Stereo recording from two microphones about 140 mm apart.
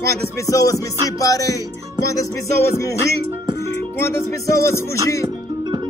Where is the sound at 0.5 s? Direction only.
25° left (ahead or behind).